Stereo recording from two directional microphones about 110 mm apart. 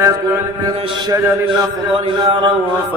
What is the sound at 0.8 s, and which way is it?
A man's voice, 50° right (ahead or behind).